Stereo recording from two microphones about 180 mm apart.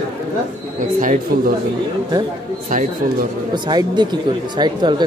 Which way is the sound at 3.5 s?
25° right (ahead or behind).